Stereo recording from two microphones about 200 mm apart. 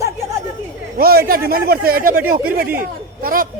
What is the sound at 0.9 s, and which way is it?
Speech, 50° right (ahead or behind).